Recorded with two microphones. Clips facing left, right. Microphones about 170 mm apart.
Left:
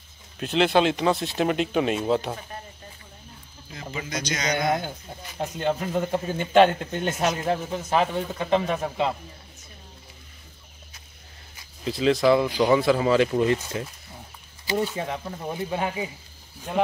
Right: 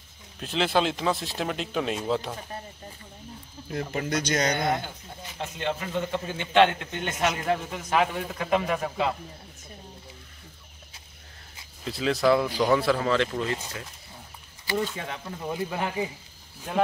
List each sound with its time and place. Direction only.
0.4 s speech: centre (ahead or behind)
3.7 s speech: 55° right (ahead or behind)
5.6 s speech: 5° left (ahead or behind)
5.9 s a man's voice: 40° left (ahead or behind); by 9.1 s 25° left (ahead or behind)
11.8 s speech: centre (ahead or behind)
13.3 s speech: 20° left (ahead or behind)